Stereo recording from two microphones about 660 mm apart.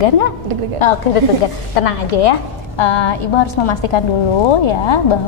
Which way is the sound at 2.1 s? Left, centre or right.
Left.